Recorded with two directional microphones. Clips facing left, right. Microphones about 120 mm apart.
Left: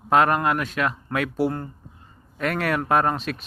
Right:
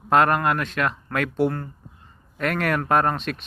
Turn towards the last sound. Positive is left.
turn(degrees=5)  # may be behind; listen again after turning